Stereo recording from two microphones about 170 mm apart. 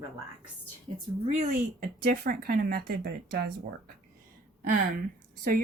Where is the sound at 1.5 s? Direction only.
55° right (ahead or behind).